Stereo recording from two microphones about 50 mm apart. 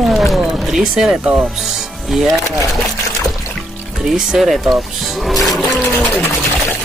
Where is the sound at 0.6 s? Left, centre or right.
Centre.